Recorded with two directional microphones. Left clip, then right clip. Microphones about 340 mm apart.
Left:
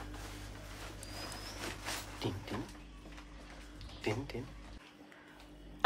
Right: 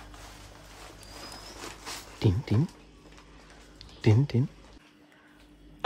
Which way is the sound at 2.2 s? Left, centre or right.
Right.